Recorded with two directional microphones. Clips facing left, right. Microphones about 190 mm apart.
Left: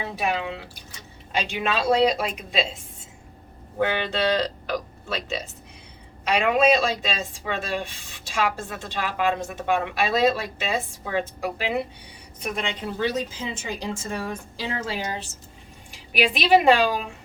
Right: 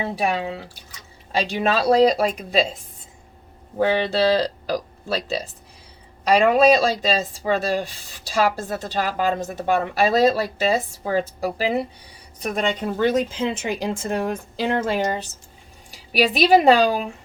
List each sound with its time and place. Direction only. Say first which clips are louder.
0.0 s speech: right 3 dB; 35° right (ahead or behind)
3.8 s a woman's voice: right 5 dB; 35° right (ahead or behind); by 15.3 s 50° right (ahead or behind)
15.9 s speech: right 3 dB; 40° right (ahead or behind)